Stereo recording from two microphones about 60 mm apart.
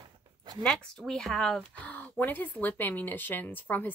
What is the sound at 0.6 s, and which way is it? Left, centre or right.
Speech, centre.